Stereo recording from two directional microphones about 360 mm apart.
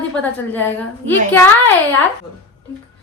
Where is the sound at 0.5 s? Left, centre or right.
Centre.